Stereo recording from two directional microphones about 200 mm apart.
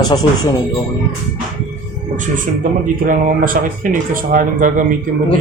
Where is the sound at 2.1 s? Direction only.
40° right (ahead or behind).